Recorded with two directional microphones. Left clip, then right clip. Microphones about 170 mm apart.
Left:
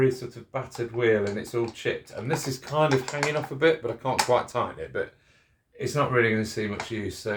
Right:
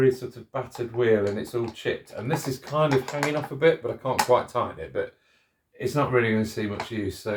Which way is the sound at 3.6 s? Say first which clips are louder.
Right 1 dB; 45° left (ahead or behind).